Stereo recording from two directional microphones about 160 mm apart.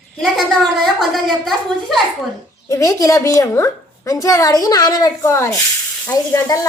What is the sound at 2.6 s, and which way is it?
A woman's voice, 20° left (ahead or behind).